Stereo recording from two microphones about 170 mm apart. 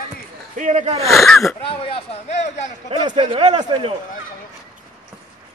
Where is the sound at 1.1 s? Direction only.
Centre (ahead or behind).